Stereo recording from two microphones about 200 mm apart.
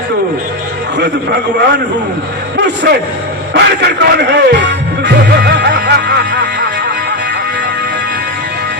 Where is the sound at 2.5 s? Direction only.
55° right (ahead or behind).